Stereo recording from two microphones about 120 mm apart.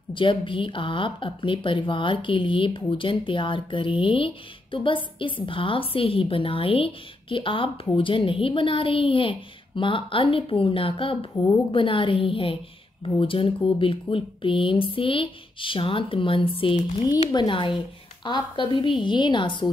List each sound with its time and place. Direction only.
0.1 s a woman's voice: 45° left (ahead or behind)